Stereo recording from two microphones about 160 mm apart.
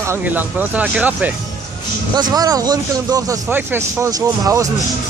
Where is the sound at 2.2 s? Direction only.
25° right (ahead or behind).